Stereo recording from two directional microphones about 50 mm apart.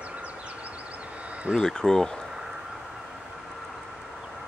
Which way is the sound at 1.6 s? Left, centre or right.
Centre.